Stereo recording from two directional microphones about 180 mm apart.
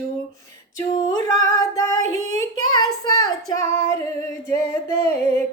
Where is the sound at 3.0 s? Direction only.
20° left (ahead or behind).